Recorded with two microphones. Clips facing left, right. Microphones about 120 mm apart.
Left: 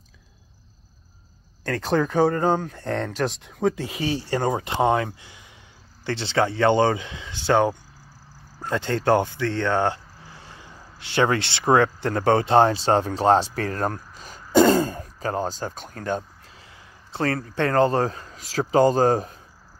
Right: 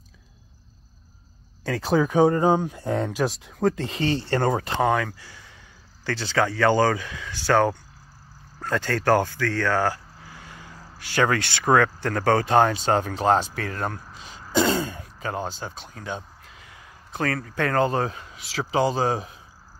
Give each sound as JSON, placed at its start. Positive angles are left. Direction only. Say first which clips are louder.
{"t": 1.6, "sound": "speech", "louder": "right 1 dB", "side_deg": -5}
{"t": 4.7, "sound": "speech", "louder": "left 1 dB", "side_deg": 25}
{"t": 16.4, "sound": "speech", "louder": "right 1 dB", "side_deg": 30}